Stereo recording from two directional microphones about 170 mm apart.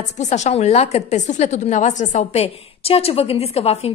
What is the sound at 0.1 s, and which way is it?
A woman's voice, 45° left (ahead or behind).